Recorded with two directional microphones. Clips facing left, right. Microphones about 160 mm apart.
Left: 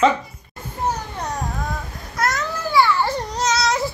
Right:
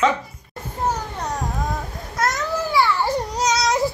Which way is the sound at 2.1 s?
20° right (ahead or behind).